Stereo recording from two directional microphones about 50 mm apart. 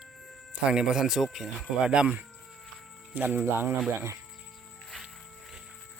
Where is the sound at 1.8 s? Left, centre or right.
Right.